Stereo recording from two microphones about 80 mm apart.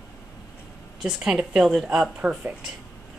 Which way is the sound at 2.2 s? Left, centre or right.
Centre.